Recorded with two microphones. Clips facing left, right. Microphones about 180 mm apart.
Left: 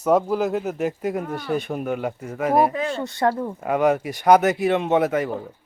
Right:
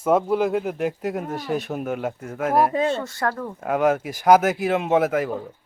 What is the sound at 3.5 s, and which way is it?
A woman's voice, centre (ahead or behind).